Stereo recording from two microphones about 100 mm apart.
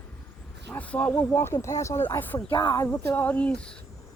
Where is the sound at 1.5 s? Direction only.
30° left (ahead or behind).